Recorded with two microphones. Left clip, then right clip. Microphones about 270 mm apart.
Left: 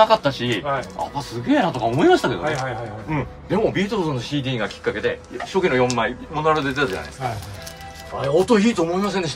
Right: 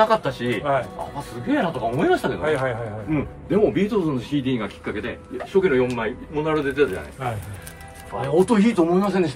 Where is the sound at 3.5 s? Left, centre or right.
Left.